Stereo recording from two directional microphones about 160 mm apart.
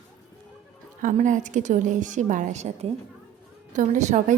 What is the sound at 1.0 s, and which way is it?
A woman's voice, 50° right (ahead or behind).